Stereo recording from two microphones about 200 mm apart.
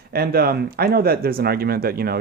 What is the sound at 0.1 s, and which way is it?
Speech, 50° right (ahead or behind).